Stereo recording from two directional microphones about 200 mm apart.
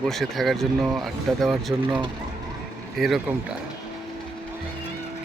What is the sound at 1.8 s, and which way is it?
Speech, 25° right (ahead or behind).